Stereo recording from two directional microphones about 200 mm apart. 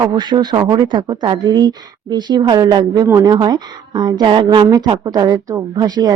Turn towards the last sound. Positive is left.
turn(degrees=-20)  # may be behind; listen again after turning